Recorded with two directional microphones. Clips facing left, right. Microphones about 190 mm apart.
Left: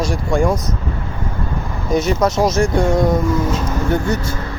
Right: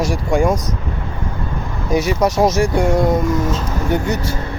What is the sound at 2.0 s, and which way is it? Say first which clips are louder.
Speech: even; 15° right (ahead or behind).